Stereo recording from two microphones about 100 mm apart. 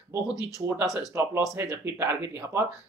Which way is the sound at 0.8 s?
35° left (ahead or behind).